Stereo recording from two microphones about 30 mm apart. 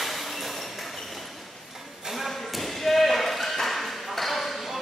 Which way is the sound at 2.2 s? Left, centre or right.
Centre.